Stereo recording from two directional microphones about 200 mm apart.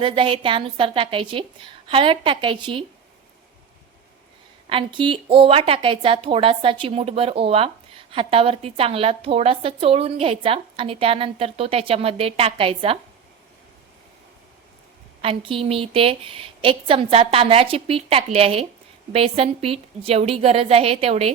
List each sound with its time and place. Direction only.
0.0 s a woman's voice: 25° right (ahead or behind)
4.7 s a woman's voice: 25° right (ahead or behind)
15.2 s a woman's voice: 25° right (ahead or behind)